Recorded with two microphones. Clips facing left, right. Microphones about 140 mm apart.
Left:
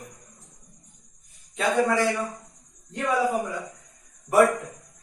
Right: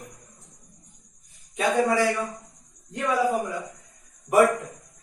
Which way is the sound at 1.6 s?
15° right (ahead or behind).